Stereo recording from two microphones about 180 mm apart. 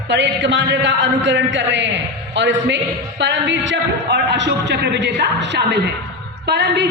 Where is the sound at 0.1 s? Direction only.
80° right.